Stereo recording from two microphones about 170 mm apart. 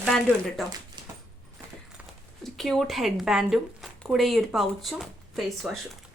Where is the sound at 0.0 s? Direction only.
Centre (ahead or behind).